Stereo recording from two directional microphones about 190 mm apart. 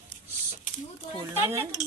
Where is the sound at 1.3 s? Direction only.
10° right (ahead or behind).